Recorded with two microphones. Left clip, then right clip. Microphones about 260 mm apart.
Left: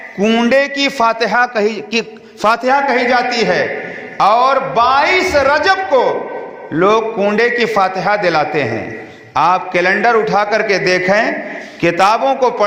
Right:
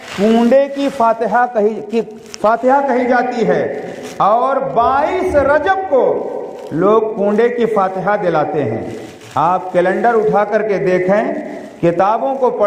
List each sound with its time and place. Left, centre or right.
0.3 s a man's voice: left
0.9 s a man's voice: left